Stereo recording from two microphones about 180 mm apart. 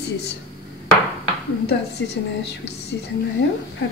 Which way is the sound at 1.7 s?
65° left (ahead or behind).